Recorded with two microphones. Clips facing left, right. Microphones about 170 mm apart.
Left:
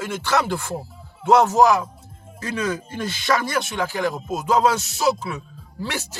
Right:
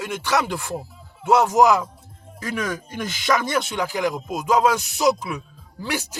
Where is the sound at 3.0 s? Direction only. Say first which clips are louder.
Even; 15° right (ahead or behind).